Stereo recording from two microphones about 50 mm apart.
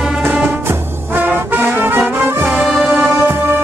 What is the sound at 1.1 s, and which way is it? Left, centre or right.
Music, right.